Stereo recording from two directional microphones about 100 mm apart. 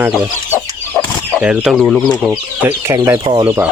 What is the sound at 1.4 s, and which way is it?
Speech, 10° right (ahead or behind).